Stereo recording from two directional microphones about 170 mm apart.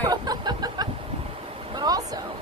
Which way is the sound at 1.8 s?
20° right (ahead or behind).